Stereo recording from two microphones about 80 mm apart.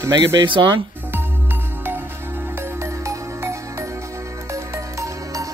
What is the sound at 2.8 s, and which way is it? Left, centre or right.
Music, right.